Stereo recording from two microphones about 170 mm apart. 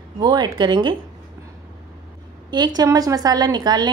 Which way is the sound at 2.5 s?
25° right (ahead or behind).